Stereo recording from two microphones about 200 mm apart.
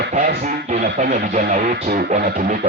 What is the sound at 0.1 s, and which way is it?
Speech, 45° right (ahead or behind).